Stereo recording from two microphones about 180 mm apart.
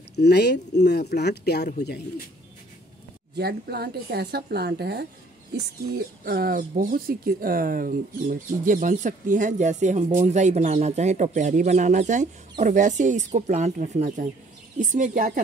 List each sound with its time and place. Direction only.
0.1 s speech: 65° left (ahead or behind)
3.3 s speech: 60° right (ahead or behind)
6.2 s speech: 55° right (ahead or behind)